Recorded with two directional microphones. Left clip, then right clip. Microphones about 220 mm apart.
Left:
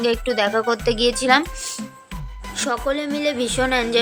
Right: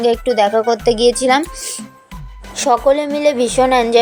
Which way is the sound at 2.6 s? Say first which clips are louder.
Right 10 dB; 15° right (ahead or behind).